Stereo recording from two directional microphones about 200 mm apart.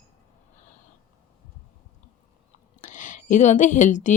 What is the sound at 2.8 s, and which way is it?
Speech, 40° left (ahead or behind).